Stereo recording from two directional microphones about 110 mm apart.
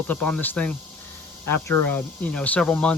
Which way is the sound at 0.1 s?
10° left (ahead or behind).